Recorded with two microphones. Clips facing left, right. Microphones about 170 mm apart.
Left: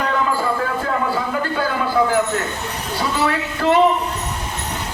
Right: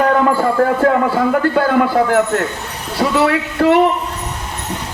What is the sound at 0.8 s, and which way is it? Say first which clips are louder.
A man's voice: right 8 dB; 60° right (ahead or behind).